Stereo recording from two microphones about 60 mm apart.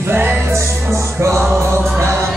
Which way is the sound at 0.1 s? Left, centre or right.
Right.